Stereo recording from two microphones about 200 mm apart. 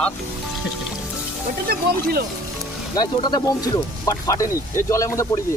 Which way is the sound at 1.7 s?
50° right (ahead or behind).